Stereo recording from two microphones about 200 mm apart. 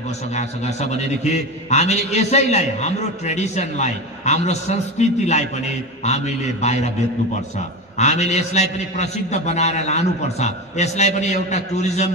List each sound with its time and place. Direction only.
0.4 s a man's voice: 35° left (ahead or behind)
8.0 s a man's voice: 35° left (ahead or behind)